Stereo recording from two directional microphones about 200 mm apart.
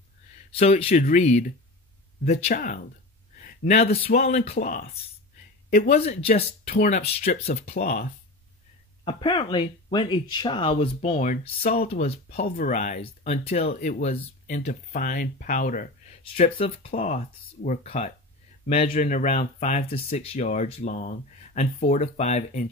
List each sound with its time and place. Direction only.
0.5 s speech: 30° left (ahead or behind)
5.9 s speech: 30° left (ahead or behind)
6.7 s speech: 45° left (ahead or behind)
7.8 s speech: 50° left (ahead or behind)
9.0 s speech: 25° left (ahead or behind); by 15.9 s 40° left (ahead or behind)
16.3 s speech: 30° left (ahead or behind)